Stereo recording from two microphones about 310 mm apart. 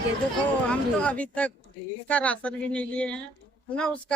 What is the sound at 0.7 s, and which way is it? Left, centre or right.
Speech, centre.